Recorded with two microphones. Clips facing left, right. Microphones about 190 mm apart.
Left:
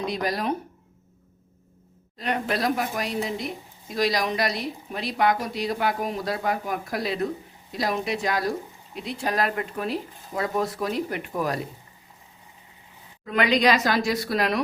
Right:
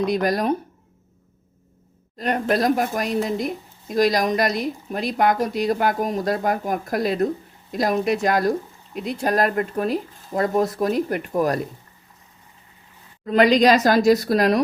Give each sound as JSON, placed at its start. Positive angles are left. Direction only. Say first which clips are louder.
{"t": 0.0, "sound": "a woman's voice", "louder": "right 6 dB", "side_deg": -50}
{"t": 2.1, "sound": "a woman's voice", "louder": "right 5 dB", "side_deg": -45}
{"t": 13.2, "sound": "a woman's voice", "louder": "right 6 dB", "side_deg": -40}